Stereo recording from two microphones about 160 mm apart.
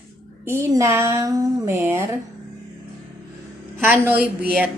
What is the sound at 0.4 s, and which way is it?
A woman's voice, 15° right (ahead or behind).